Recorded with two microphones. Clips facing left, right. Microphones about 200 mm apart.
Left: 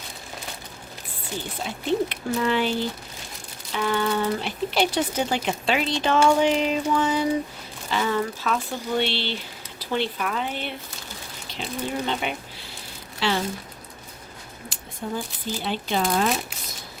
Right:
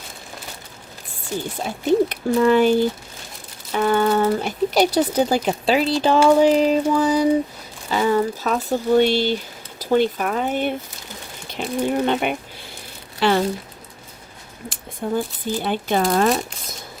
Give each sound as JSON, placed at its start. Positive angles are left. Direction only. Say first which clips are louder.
{"t": 1.6, "sound": "speech", "louder": "right 6 dB", "side_deg": -45}
{"t": 14.7, "sound": "speech", "louder": "right 7 dB", "side_deg": -55}